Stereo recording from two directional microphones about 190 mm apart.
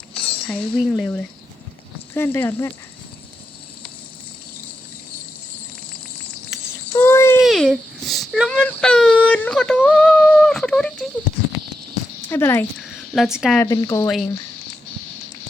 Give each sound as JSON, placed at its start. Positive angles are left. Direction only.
{"t": 0.1, "sound": "speech", "side_deg": 5}
{"t": 6.5, "sound": "a sound", "side_deg": 15}
{"t": 7.4, "sound": "speech", "side_deg": 0}
{"t": 12.3, "sound": "speech", "side_deg": 10}
{"t": 12.8, "sound": "speech", "side_deg": 0}
{"t": 13.6, "sound": "speech", "side_deg": 15}